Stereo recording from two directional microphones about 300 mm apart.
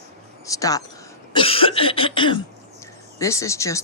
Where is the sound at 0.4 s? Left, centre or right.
Centre.